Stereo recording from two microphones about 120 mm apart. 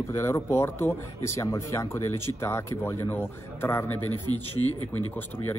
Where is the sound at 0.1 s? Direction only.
20° left (ahead or behind).